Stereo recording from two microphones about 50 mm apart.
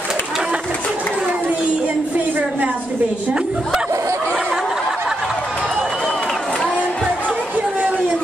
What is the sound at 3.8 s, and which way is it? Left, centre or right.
Snicker, right.